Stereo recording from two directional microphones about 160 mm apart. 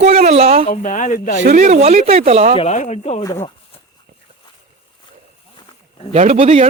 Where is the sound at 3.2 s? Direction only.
20° left (ahead or behind).